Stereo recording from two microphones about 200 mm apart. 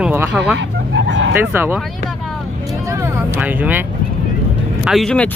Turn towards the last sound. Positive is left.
turn(degrees=5)  # may be behind; listen again after turning